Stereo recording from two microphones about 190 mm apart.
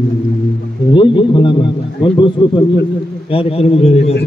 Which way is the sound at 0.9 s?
25° left (ahead or behind).